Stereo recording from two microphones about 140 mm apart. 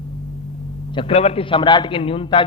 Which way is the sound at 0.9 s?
40° left (ahead or behind).